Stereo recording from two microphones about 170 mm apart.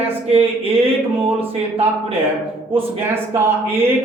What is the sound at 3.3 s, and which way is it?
Speech, 10° right (ahead or behind).